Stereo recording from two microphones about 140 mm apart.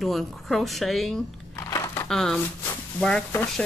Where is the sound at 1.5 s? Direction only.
20° left (ahead or behind).